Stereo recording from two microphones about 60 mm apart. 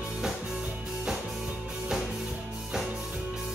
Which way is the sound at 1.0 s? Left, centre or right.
Centre.